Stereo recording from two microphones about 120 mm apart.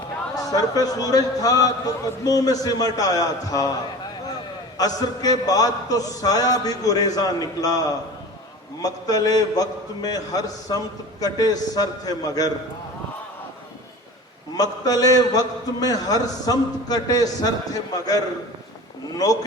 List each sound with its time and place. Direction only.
0.3 s a man's voice: 30° left (ahead or behind)
4.8 s a man's voice: 30° left (ahead or behind)
14.5 s a man's voice: 30° left (ahead or behind)